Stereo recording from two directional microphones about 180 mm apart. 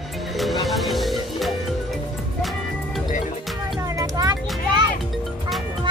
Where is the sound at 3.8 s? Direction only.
20° right (ahead or behind).